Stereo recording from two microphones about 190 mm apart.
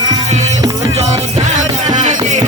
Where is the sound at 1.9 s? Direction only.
40° right (ahead or behind).